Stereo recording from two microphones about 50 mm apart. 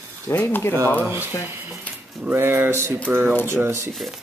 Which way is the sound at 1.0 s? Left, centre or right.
Right.